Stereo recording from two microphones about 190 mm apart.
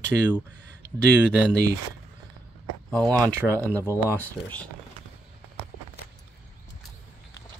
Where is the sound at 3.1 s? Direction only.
15° right (ahead or behind).